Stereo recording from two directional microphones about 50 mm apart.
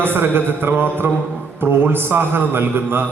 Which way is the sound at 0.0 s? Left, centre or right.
Right.